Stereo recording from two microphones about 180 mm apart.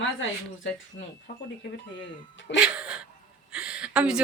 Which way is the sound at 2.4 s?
90° left.